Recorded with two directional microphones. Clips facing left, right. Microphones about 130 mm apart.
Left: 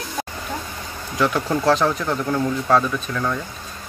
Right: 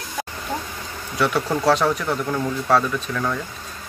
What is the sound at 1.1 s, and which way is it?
Speech, 5° right (ahead or behind).